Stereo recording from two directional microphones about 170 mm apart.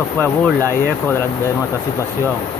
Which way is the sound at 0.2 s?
10° left (ahead or behind).